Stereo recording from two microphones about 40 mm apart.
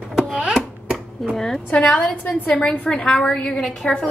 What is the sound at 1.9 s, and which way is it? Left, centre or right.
Dishes, centre.